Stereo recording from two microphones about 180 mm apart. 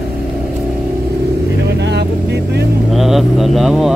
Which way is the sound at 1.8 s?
70° right (ahead or behind).